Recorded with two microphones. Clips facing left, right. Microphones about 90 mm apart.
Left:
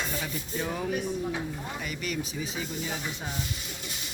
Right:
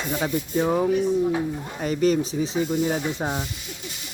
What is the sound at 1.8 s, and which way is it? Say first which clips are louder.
Speech: right 16 dB; 40° right (ahead or behind).